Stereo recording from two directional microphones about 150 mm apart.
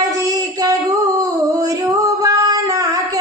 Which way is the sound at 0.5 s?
25° right (ahead or behind).